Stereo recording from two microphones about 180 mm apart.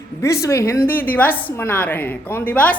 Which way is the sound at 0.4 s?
15° left (ahead or behind).